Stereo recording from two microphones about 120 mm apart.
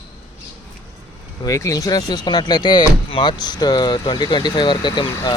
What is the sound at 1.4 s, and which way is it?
Speech, 25° left (ahead or behind).